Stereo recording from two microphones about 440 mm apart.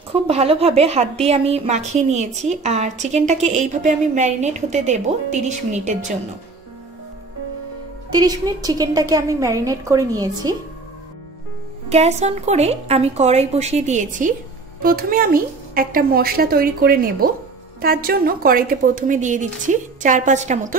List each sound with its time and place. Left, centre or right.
0.1 s a woman's voice: centre
8.1 s a woman's voice: centre
11.9 s a woman's voice: centre